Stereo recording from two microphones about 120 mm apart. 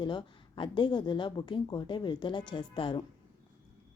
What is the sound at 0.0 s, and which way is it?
A woman's voice, 40° left (ahead or behind).